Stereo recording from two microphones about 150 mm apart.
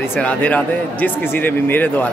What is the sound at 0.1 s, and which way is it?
Speech, 10° left (ahead or behind).